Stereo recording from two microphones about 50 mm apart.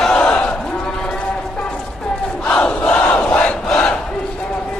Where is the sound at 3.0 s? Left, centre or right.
Left.